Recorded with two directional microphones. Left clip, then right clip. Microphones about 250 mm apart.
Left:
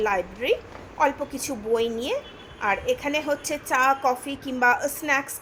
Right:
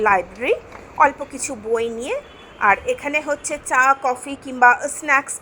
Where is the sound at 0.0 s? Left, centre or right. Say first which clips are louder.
Right 7 dB; centre.